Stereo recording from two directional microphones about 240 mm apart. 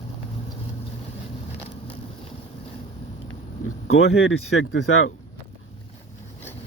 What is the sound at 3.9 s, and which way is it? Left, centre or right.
Speech, left.